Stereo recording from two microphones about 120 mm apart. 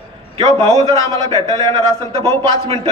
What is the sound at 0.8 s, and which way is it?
A man's voice, 25° left (ahead or behind).